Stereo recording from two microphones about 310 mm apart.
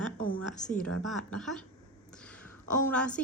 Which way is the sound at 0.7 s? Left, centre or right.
Centre.